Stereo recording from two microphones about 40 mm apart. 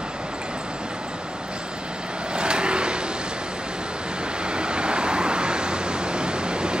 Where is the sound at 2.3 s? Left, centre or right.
Right.